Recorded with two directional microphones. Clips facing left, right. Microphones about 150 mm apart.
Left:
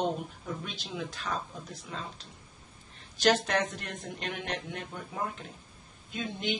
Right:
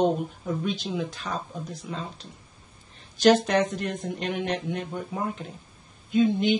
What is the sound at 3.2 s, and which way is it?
Speech, 10° right (ahead or behind).